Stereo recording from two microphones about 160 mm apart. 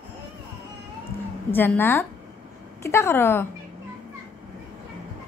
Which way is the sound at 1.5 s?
15° left (ahead or behind).